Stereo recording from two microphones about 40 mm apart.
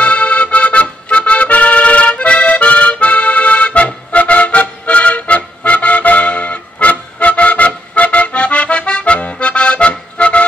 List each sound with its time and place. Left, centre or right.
0.0 s accordion: left